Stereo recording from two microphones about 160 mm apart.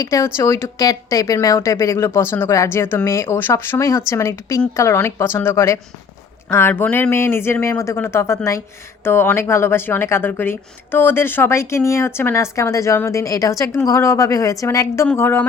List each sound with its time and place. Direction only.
0.0 s speech: 20° left (ahead or behind)